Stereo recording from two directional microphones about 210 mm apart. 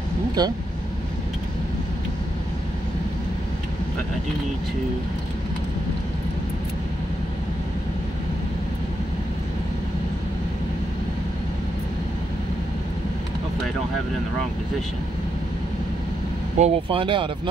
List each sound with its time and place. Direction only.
0.4 s speech: 20° right (ahead or behind)
16.5 s speech: 30° right (ahead or behind)